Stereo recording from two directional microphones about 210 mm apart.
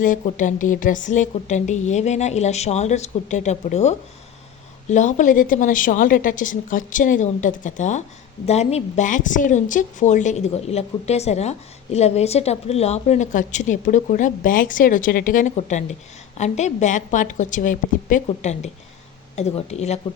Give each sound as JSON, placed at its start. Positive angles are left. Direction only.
{"t": 0.0, "sound": "a woman's voice", "side_deg": 40}